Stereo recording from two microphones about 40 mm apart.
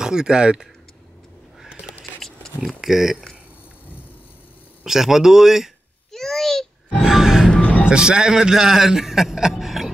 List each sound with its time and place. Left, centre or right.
0.0 s speech: centre
2.6 s speech: centre
4.8 s speech: centre
6.1 s babbling: centre
7.0 s music: centre
7.9 s a man's voice: centre